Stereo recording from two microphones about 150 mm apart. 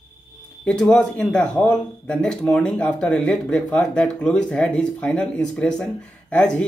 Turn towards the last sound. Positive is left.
turn(degrees=5)  # may be behind; listen again after turning